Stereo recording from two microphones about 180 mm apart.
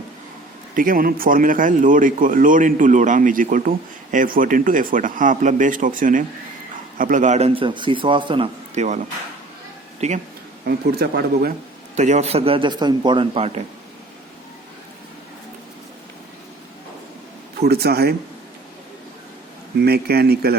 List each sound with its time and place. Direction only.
0.8 s a man's voice: 50° right (ahead or behind)
10.0 s a man's voice: 40° right (ahead or behind)
10.7 s speech: 60° right (ahead or behind)
11.9 s a man's voice: 40° right (ahead or behind)
17.6 s speech: 60° right (ahead or behind)
19.8 s speech: 60° right (ahead or behind)